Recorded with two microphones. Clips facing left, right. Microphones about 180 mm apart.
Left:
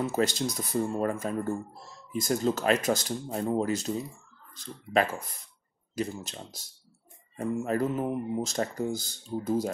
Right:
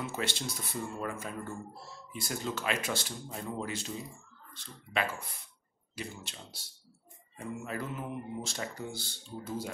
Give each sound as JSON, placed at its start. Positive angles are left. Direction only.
{"t": 0.0, "sound": "speech", "side_deg": 40}